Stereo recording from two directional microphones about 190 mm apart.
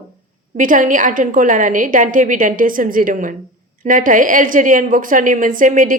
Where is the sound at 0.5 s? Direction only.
45° right (ahead or behind).